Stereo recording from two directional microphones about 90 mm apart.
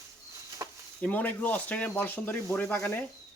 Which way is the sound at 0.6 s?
35° right (ahead or behind).